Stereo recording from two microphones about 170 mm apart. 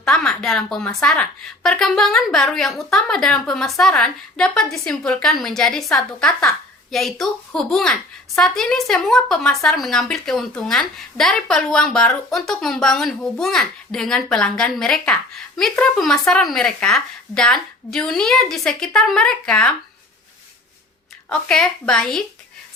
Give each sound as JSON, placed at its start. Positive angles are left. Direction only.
{"t": 0.0, "sound": "a woman's voice", "side_deg": 0}
{"t": 21.2, "sound": "a woman's voice", "side_deg": 5}